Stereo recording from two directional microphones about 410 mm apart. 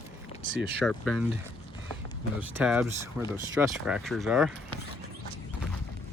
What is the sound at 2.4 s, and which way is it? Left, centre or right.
Speech, centre.